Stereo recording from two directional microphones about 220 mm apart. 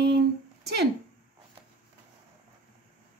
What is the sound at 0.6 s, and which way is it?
Speech, 50° right (ahead or behind).